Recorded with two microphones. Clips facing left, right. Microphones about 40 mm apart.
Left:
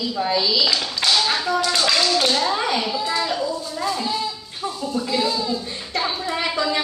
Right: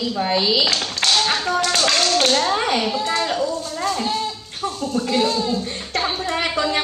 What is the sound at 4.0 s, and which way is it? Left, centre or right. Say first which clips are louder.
Speech: right 2 dB; right.